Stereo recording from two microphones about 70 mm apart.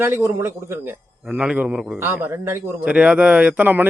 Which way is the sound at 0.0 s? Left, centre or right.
Right.